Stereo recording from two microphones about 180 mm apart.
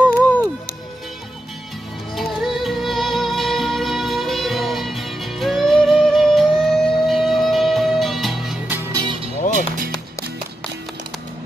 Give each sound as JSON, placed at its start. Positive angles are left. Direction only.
{"t": 0.0, "sound": "music", "side_deg": 10}
{"t": 2.1, "sound": "music", "side_deg": 0}
{"t": 8.9, "sound": "music", "side_deg": -25}